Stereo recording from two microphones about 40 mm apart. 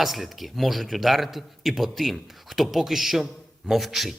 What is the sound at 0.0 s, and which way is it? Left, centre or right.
A man's voice, centre.